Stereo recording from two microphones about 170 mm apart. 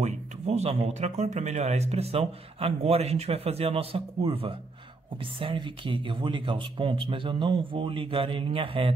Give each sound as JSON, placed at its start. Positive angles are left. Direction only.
{"t": 0.0, "sound": "speech", "side_deg": -40}